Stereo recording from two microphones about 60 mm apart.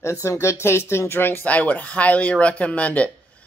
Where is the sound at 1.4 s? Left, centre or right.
Left.